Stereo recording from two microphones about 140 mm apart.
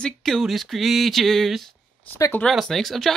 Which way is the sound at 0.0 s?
5° left (ahead or behind).